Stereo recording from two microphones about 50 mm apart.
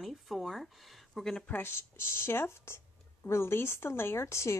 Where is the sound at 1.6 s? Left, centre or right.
Left.